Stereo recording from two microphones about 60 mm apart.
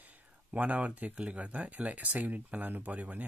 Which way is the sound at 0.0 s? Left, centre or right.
Right.